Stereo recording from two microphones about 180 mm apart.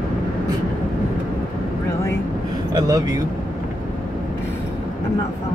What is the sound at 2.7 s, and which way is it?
Speech, 20° right (ahead or behind).